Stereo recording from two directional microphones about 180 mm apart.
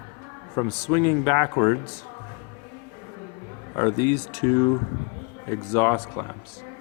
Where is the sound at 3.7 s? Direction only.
20° left (ahead or behind).